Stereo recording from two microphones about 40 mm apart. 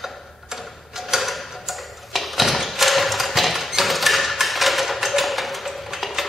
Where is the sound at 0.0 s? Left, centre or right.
Centre.